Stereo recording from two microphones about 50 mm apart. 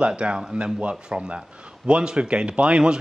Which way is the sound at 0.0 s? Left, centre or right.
Right.